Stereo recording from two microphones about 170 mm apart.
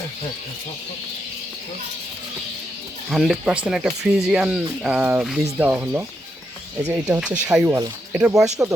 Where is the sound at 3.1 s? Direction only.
5° right (ahead or behind).